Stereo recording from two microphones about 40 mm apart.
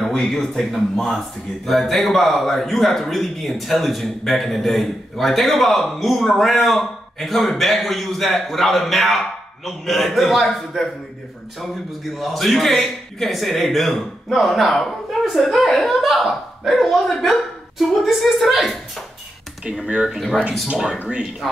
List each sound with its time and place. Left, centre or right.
0.2 s a man's voice: centre
1.7 s a man's voice: centre
19.9 s speech: right